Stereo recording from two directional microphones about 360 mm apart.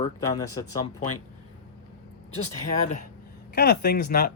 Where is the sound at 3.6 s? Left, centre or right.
Left.